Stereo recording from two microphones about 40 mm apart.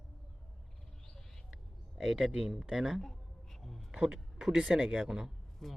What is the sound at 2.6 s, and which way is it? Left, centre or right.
Speech, centre.